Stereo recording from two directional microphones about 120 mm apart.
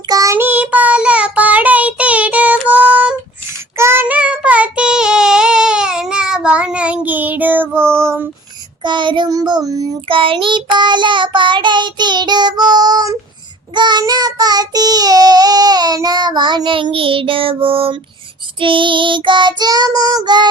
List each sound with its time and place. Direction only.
0.1 s child singing: 30° right (ahead or behind)
0.3 s child singing: 15° right (ahead or behind)
3.8 s child singing: 20° right (ahead or behind)
4.0 s child singing: 10° right (ahead or behind)
8.8 s child singing: 40° right (ahead or behind)
10.1 s child singing: 45° right (ahead or behind)